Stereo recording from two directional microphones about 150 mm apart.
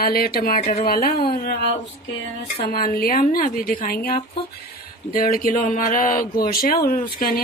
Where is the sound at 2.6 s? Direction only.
70° left (ahead or behind); by 4.6 s 90° left.